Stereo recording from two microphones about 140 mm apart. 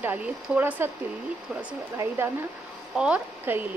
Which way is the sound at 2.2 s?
15° right (ahead or behind).